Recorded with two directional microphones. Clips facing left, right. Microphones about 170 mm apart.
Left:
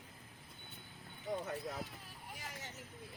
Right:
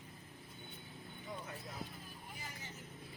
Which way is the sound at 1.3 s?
40° left (ahead or behind).